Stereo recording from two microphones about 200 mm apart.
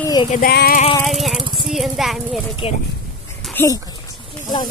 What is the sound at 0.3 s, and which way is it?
Speech, 50° left (ahead or behind).